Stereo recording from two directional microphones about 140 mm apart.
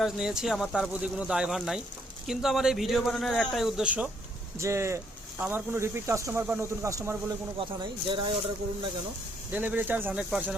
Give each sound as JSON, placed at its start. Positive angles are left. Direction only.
{"t": 0.0, "sound": "a man's voice", "side_deg": -5}
{"t": 4.5, "sound": "speech", "side_deg": -20}
{"t": 7.6, "sound": "speech", "side_deg": -35}
{"t": 9.5, "sound": "a man's voice", "side_deg": -15}